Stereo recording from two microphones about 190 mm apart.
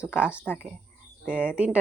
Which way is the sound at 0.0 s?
5° right (ahead or behind).